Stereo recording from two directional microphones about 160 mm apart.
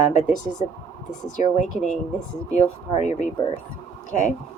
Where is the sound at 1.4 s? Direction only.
50° left (ahead or behind).